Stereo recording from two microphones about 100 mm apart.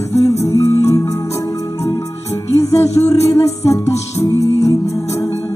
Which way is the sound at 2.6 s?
30° left (ahead or behind).